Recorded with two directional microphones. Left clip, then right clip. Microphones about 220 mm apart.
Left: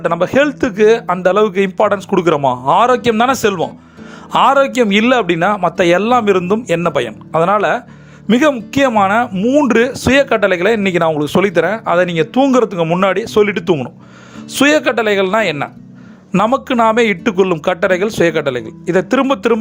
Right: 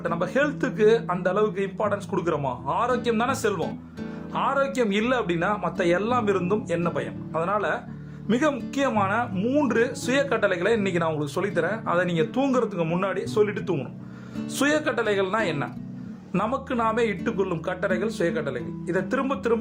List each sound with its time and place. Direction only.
0.0 s speech: 35° left (ahead or behind)